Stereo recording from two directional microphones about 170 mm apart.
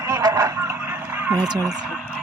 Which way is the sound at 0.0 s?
20° right (ahead or behind).